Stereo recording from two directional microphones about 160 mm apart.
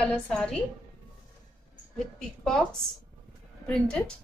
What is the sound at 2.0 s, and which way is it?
Speech, 5° left (ahead or behind).